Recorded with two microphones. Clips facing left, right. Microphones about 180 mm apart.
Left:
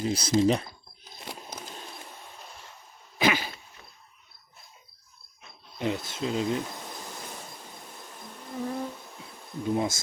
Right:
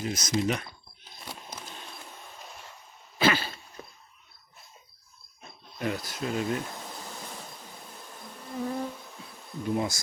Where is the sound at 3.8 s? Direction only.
45° right (ahead or behind).